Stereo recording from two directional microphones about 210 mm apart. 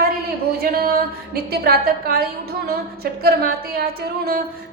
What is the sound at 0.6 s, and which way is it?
A woman's voice, 45° right (ahead or behind).